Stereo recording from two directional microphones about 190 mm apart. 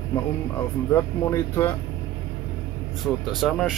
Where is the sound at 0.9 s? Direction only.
15° left (ahead or behind).